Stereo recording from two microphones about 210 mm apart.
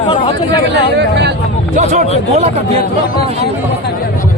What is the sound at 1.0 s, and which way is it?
Speech, 55° right (ahead or behind).